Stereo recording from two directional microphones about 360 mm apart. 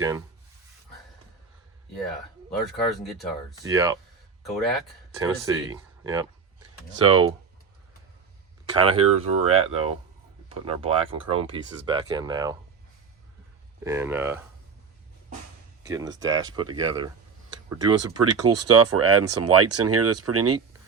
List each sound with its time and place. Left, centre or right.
0.0 s speech: centre
2.6 s speech: centre
8.9 s speech: centre
13.8 s speech: centre
15.8 s speech: centre
18.1 s speech: right